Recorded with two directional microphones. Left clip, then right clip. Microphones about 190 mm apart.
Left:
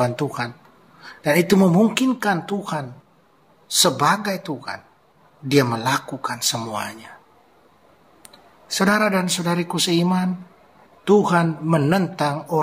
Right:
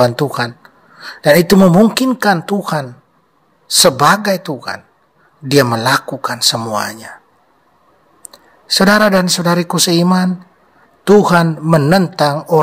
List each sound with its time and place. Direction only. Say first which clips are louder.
0.0 s speech: right 9 dB; 50° right (ahead or behind)
8.6 s speech: right 9 dB; 50° right (ahead or behind)